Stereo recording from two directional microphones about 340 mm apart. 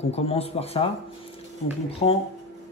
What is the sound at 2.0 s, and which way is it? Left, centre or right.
Speech, centre.